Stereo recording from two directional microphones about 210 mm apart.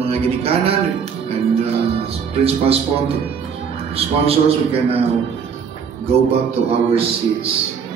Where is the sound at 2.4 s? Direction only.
30° right (ahead or behind).